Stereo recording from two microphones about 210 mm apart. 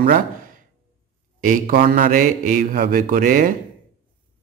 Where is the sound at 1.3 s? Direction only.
40° right (ahead or behind).